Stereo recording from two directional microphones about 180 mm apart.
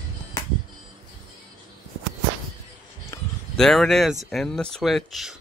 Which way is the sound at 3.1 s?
15° left (ahead or behind).